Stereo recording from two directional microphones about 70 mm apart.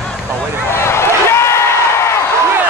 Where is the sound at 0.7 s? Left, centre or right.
Left.